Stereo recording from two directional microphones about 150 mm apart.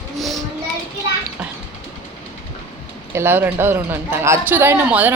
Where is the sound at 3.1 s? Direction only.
15° right (ahead or behind).